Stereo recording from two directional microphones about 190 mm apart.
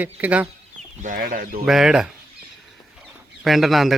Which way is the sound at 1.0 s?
45° right (ahead or behind).